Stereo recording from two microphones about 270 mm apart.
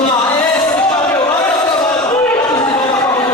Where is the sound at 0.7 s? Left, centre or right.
Centre.